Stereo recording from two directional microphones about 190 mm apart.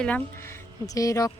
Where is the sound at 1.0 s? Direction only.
15° left (ahead or behind).